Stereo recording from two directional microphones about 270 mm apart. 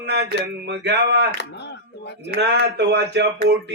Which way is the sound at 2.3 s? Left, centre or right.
Right.